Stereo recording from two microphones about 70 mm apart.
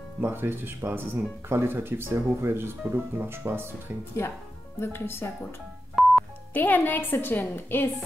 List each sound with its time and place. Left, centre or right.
0.2 s speech: right
4.2 s speech: left
6.0 s telephone dialing: centre
6.5 s a woman's voice: left